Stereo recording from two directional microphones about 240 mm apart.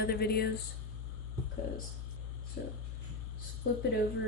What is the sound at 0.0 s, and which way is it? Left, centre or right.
Speech, left.